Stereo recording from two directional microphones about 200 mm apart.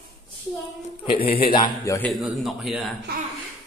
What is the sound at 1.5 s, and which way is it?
Speech, 20° left (ahead or behind).